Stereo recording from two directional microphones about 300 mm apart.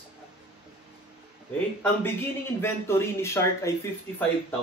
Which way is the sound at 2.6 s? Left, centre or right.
Centre.